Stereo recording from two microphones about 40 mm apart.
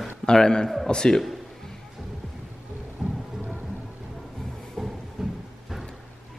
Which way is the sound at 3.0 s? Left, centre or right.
Centre.